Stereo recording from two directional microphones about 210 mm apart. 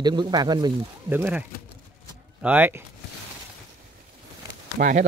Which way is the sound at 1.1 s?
10° right (ahead or behind).